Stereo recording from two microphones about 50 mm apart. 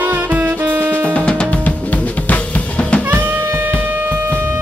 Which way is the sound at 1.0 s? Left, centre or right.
Left.